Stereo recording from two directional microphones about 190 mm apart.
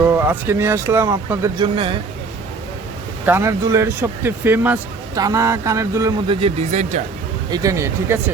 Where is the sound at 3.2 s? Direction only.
15° right (ahead or behind).